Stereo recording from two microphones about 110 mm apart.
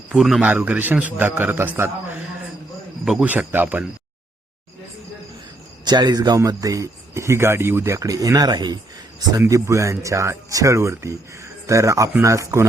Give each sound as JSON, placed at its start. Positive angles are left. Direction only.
{"t": 0.1, "sound": "a man's voice", "side_deg": 0}
{"t": 0.4, "sound": "a man's voice", "side_deg": -15}
{"t": 3.0, "sound": "a man's voice", "side_deg": -5}
{"t": 3.2, "sound": "a man's voice", "side_deg": -15}
{"t": 5.8, "sound": "speech", "side_deg": -40}
{"t": 9.4, "sound": "speech", "side_deg": -30}